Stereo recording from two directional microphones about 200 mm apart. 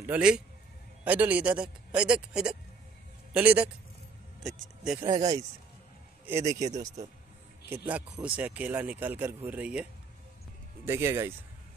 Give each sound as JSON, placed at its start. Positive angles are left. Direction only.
{"t": 0.0, "sound": "speech", "side_deg": -5}
{"t": 5.1, "sound": "speech", "side_deg": -20}
{"t": 7.9, "sound": "speech", "side_deg": -5}
{"t": 10.9, "sound": "speech", "side_deg": -15}